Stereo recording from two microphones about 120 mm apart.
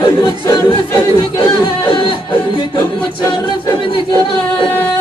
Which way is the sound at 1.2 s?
40° left (ahead or behind).